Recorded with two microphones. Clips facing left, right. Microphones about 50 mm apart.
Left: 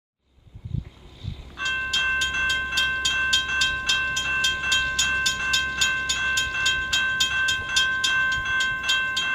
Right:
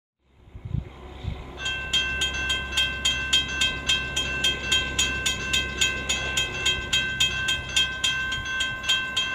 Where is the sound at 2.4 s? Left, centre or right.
Centre.